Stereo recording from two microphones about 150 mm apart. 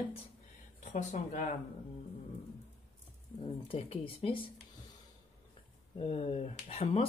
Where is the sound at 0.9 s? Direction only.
55° left (ahead or behind).